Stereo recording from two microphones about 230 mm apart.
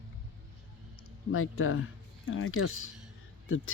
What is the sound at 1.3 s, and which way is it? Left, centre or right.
Speech, left.